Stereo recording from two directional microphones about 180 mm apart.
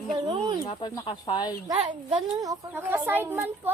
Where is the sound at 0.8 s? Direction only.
25° left (ahead or behind).